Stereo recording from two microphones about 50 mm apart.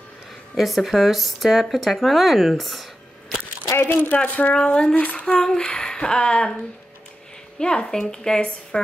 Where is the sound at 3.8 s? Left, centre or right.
Left.